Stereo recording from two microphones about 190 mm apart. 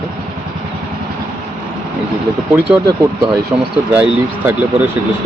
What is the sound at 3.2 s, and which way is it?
Speech, 25° right (ahead or behind).